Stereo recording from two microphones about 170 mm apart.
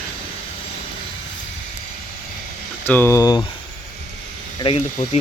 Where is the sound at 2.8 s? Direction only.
15° left (ahead or behind).